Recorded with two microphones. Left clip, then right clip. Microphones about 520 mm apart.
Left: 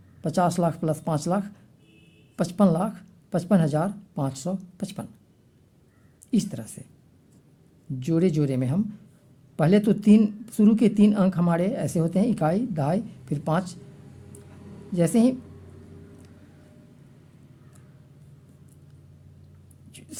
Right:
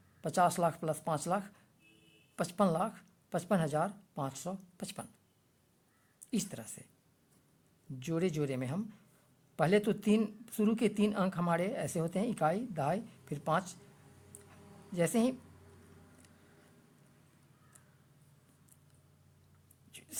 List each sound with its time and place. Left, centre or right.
0.2 s speech: right
6.3 s speech: right
7.9 s speech: right
14.9 s speech: right
19.9 s a sound: right